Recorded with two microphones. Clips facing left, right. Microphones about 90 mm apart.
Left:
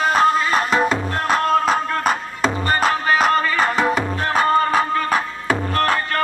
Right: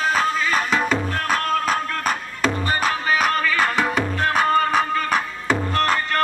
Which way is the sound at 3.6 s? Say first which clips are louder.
Left 2 dB; 20° left (ahead or behind).